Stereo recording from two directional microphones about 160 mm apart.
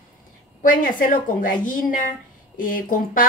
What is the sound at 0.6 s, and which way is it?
Speech, 60° left (ahead or behind).